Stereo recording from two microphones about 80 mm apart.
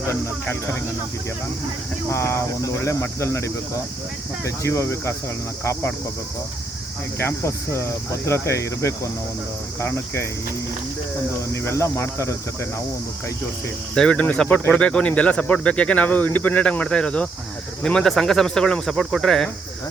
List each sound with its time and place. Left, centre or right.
0.1 s speech: left
2.0 s speech: left
7.2 s speech: left
11.5 s speech: left
13.9 s speech: centre